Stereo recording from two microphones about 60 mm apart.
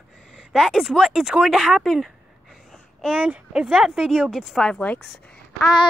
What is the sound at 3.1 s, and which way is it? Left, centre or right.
Speech, centre.